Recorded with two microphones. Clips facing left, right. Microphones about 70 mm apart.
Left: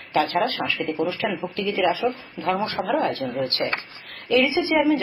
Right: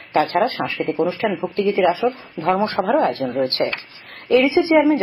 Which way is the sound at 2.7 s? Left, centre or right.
Right.